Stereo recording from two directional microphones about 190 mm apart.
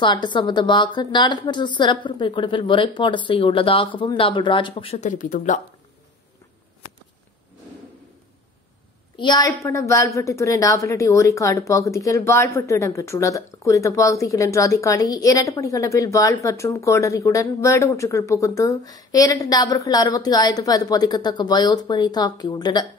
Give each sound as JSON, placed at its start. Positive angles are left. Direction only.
{"t": 0.0, "sound": "speech", "side_deg": 25}
{"t": 9.2, "sound": "a woman's voice", "side_deg": 20}